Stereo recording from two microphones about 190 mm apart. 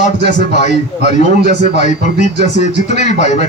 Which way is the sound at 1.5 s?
40° left (ahead or behind).